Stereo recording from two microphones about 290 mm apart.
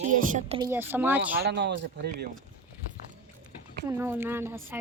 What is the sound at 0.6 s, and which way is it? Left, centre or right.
Speech, centre.